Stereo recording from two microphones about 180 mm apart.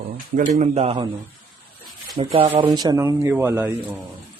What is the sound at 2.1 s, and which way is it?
Speech, 30° right (ahead or behind).